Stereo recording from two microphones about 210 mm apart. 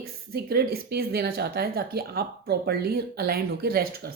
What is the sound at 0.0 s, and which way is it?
Speech, 45° right (ahead or behind).